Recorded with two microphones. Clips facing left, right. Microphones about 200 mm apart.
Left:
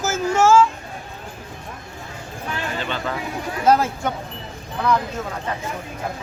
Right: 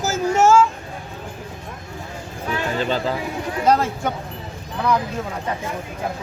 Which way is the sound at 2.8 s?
30° right (ahead or behind).